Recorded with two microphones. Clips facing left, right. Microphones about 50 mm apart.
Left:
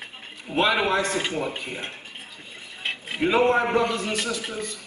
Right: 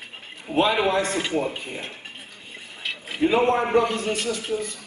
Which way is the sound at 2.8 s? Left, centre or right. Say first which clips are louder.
Left 1 dB; left.